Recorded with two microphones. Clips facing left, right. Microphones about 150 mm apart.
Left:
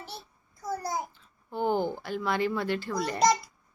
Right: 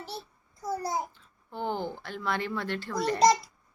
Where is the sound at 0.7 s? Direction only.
25° right (ahead or behind).